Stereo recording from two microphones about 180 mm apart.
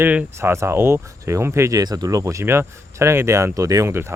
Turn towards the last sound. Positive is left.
turn(degrees=-15)  # may be behind; listen again after turning